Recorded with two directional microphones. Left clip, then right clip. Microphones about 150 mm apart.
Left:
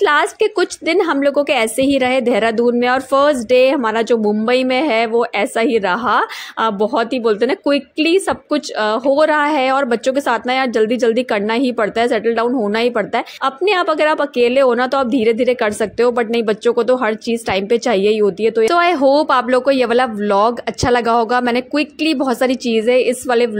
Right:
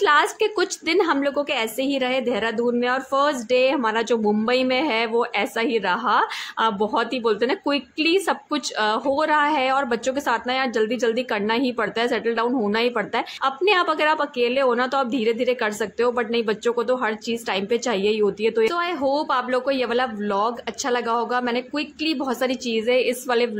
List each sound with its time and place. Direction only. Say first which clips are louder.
0.0 s a woman's voice: left 4 dB; 30° left (ahead or behind)
18.7 s a woman's voice: left 10 dB; 45° left (ahead or behind)